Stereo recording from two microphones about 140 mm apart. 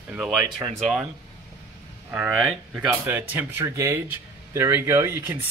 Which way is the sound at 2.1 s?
10° right (ahead or behind).